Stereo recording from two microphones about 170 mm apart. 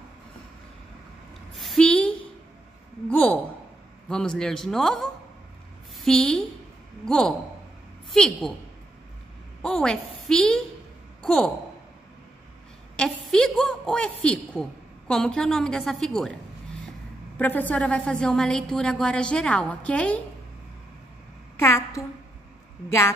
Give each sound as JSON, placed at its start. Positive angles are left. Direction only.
{"t": 1.6, "sound": "a sound", "side_deg": 5}
{"t": 4.1, "sound": "a woman's voice", "side_deg": 5}
{"t": 9.6, "sound": "a woman's voice", "side_deg": 5}
{"t": 12.9, "sound": "a woman's voice", "side_deg": 5}
{"t": 17.4, "sound": "a woman's voice", "side_deg": 10}
{"t": 21.5, "sound": "a woman's voice", "side_deg": 15}